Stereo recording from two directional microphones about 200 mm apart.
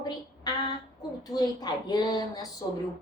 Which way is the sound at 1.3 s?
20° left (ahead or behind).